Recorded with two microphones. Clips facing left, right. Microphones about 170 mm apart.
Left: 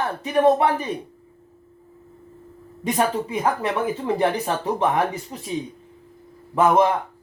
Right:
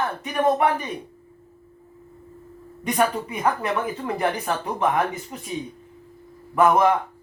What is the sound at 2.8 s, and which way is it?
Speech, 30° left (ahead or behind).